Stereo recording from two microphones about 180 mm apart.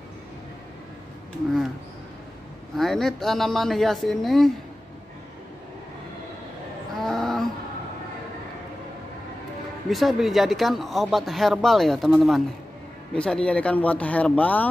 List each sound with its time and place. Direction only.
2.8 s speech: centre (ahead or behind)
7.0 s a sound: centre (ahead or behind)
9.8 s speech: centre (ahead or behind)